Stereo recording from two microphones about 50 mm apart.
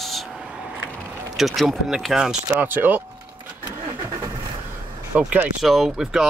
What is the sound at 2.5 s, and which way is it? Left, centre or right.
Speech, right.